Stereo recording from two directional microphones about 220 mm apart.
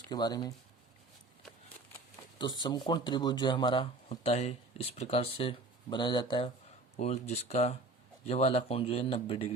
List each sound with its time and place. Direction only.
0.1 s speech: 20° left (ahead or behind)
2.6 s speech: 20° left (ahead or behind)